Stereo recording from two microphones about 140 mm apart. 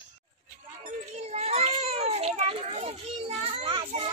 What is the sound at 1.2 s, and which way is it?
Children playing, 50° right (ahead or behind).